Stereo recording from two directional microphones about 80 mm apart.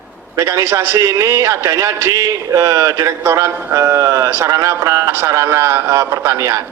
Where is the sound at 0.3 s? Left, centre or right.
Right.